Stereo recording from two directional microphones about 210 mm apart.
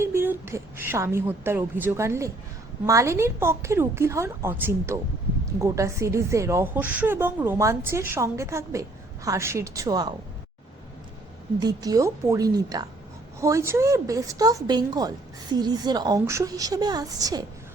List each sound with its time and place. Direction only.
0.0 s a woman's voice: 10° right (ahead or behind)
11.6 s a woman's voice: 15° right (ahead or behind)